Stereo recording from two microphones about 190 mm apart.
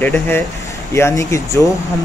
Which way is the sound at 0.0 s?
10° left (ahead or behind).